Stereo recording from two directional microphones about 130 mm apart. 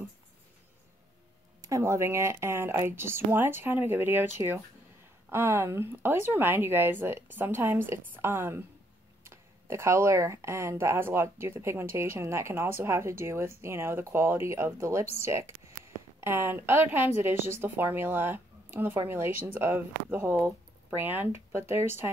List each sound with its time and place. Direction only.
1.6 s speech: 20° right (ahead or behind)